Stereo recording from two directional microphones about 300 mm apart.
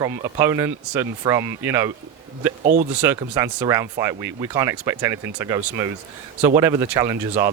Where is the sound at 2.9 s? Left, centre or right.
Centre.